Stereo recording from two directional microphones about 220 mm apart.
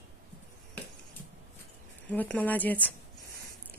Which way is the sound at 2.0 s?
5° left (ahead or behind).